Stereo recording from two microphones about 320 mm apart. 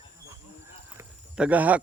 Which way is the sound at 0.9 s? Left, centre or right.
Centre.